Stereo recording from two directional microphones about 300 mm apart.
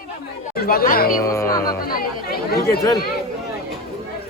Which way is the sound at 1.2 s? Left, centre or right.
Centre.